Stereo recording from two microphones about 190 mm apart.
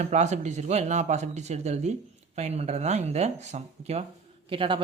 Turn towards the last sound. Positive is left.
turn(degrees=-25)  # may be behind; listen again after turning